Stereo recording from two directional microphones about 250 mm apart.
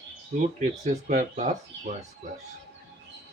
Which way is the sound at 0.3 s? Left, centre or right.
Right.